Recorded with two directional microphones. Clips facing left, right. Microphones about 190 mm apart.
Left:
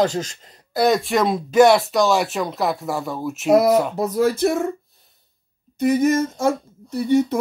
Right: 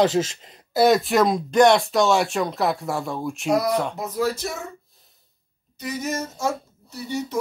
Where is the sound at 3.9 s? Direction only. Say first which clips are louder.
Left 6 dB; 45° left (ahead or behind).